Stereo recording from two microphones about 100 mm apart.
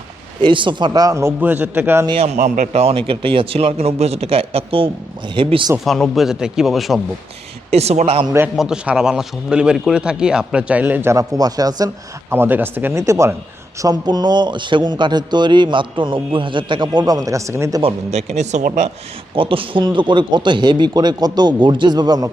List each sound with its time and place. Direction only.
0.4 s a man's voice: 55° right (ahead or behind); by 1.3 s 35° right (ahead or behind)
1.4 s speech: 15° right (ahead or behind)
2.7 s speech: 80° right
3.1 s speech: 65° right (ahead or behind)
5.3 s speech: 55° right (ahead or behind)
5.8 s speech: centre (ahead or behind)
7.7 s a man's voice: 90° right
8.5 s speech: 5° right (ahead or behind)
11.1 s speech: 35° right (ahead or behind)
12.3 s speech: 20° right (ahead or behind)
13.7 s a man's voice: 40° right (ahead or behind)
17.8 s a man's voice: 90° right
19.4 s a man's voice: 65° right (ahead or behind); by 22.3 s 40° right (ahead or behind)